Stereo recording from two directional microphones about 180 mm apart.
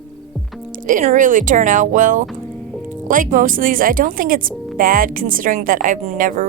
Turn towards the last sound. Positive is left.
turn(degrees=-45)  # may be behind; listen again after turning